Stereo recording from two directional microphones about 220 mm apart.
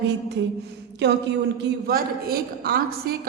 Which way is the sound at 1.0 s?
50° right (ahead or behind).